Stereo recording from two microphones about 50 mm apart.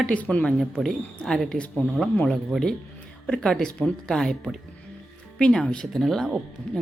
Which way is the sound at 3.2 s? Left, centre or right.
Centre.